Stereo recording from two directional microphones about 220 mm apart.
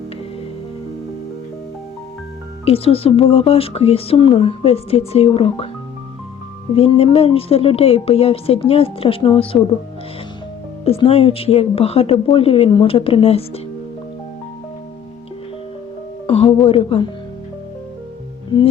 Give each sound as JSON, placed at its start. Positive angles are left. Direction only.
{"t": 2.6, "sound": "speech", "side_deg": 25}
{"t": 6.7, "sound": "speech", "side_deg": 25}
{"t": 10.8, "sound": "speech", "side_deg": 25}
{"t": 16.2, "sound": "music", "side_deg": 25}
{"t": 16.6, "sound": "speech", "side_deg": 25}